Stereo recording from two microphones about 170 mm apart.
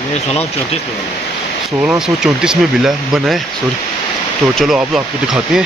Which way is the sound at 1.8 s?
5° right (ahead or behind).